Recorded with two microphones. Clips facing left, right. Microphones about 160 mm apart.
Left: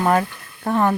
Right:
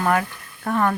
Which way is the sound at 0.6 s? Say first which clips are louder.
Left 2 dB; 30° left (ahead or behind).